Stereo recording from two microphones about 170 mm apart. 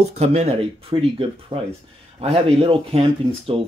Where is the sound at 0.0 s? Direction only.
40° right (ahead or behind).